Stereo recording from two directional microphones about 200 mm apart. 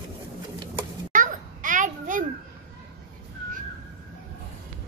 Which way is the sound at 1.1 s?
40° right (ahead or behind).